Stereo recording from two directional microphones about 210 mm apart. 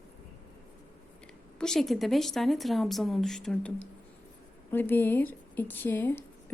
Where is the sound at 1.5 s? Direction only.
5° left (ahead or behind).